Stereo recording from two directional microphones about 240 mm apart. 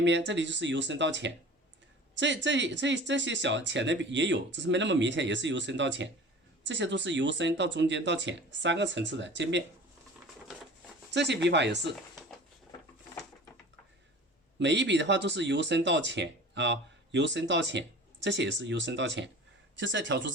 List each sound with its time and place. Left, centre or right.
0.0 s speech: right
11.1 s speech: right
14.6 s speech: right